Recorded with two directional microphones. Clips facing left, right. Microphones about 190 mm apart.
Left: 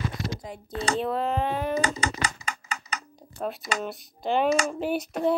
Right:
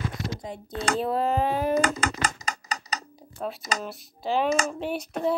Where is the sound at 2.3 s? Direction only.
40° right (ahead or behind).